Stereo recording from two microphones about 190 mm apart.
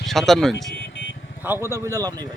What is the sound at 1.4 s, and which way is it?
Speech, 10° right (ahead or behind).